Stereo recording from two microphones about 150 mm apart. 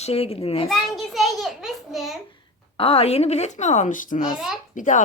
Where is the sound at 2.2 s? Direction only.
35° left (ahead or behind); by 5.0 s 55° left (ahead or behind).